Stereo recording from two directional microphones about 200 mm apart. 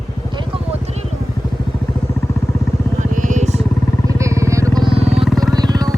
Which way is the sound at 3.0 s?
40° right (ahead or behind).